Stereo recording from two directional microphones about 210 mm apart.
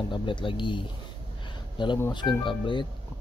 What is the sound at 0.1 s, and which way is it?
Speech, 25° left (ahead or behind).